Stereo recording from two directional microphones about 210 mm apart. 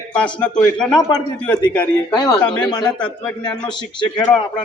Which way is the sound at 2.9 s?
5° left (ahead or behind).